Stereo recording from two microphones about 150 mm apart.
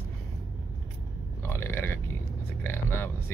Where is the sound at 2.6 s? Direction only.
15° left (ahead or behind).